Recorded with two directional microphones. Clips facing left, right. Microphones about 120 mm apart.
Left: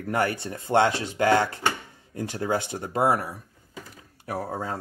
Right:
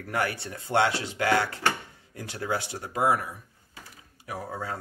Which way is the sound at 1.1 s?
35° left (ahead or behind).